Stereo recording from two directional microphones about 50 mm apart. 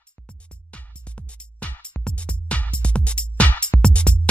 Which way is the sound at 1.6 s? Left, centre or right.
Left.